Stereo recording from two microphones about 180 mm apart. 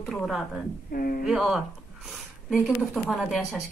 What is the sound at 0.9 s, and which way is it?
Speech, 55° left (ahead or behind).